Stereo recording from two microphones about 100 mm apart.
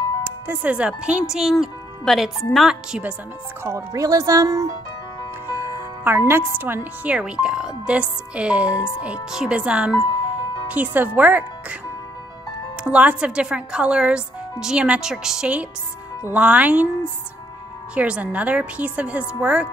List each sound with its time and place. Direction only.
0.2 s a woman's voice: 20° right (ahead or behind)
3.6 s a woman's voice: 30° right (ahead or behind); by 11.4 s 15° right (ahead or behind)
12.8 s a woman's voice: 10° right (ahead or behind)
17.9 s a woman's voice: 10° right (ahead or behind)